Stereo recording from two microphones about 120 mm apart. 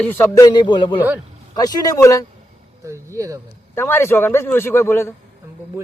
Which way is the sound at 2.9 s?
25° right (ahead or behind).